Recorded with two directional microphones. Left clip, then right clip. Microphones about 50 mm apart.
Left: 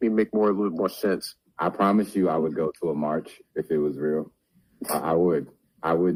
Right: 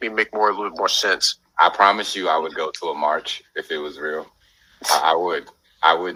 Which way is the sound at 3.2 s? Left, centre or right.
Right.